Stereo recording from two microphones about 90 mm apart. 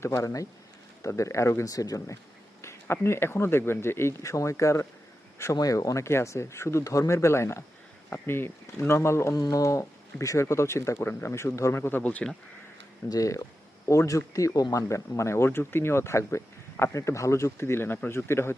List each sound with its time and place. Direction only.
0.0 s speech: 35° left (ahead or behind)
2.8 s speech: 30° left (ahead or behind)
13.1 s speech: 40° left (ahead or behind)